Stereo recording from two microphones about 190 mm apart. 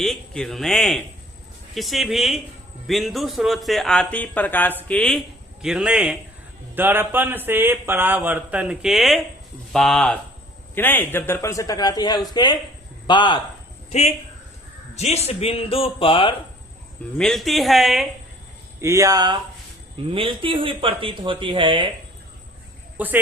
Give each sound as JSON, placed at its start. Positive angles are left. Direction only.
{"t": 0.0, "sound": "a man's voice", "side_deg": 0}
{"t": 14.9, "sound": "speech", "side_deg": 35}
{"t": 17.2, "sound": "speech", "side_deg": 0}
{"t": 18.8, "sound": "speech", "side_deg": -15}
{"t": 23.0, "sound": "speech", "side_deg": -10}